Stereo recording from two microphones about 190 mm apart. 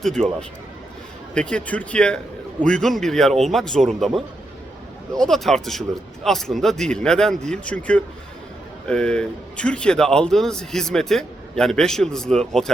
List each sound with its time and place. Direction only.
0.0 s a man's voice: 5° left (ahead or behind)